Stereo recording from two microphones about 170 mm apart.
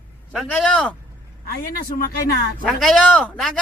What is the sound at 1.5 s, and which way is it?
Speech, 60° left (ahead or behind).